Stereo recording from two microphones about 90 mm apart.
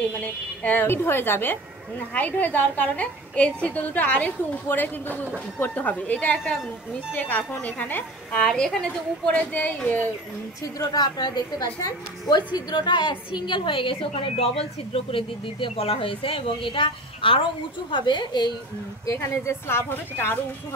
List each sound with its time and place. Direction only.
0.0 s a woman's voice: 15° left (ahead or behind)
10.6 s a woman's voice: 45° left (ahead or behind)
12.5 s a woman's voice: 55° left (ahead or behind); by 16.5 s 80° left
16.6 s a woman's voice: 70° left (ahead or behind)
17.9 s a woman's voice: 60° left (ahead or behind)
19.0 s a woman's voice: 35° left (ahead or behind)